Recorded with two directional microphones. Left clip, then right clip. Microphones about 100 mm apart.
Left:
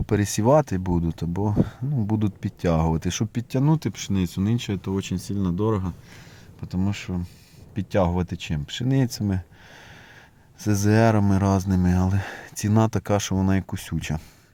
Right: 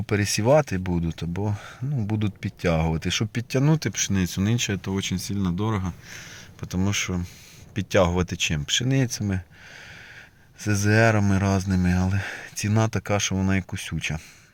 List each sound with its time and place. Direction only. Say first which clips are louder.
0.0 s speech: left 1 dB; 40° left (ahead or behind)
3.3 s speech: even; 15° left (ahead or behind)
4.8 s speech: even; 20° left (ahead or behind)
6.6 s speech: right 4 dB; centre (ahead or behind)
8.8 s speech: left 1 dB; 25° left (ahead or behind)
10.6 s speech: even; 40° left (ahead or behind)